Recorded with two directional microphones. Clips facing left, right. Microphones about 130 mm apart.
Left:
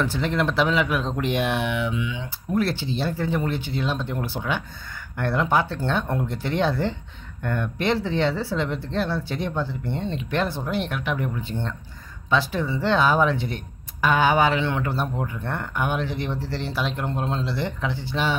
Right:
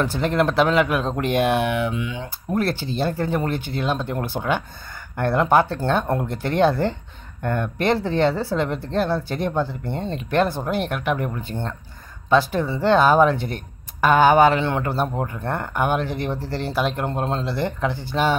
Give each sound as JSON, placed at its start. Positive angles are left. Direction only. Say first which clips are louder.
{"t": 0.0, "sound": "speech", "louder": "right 3 dB", "side_deg": -45}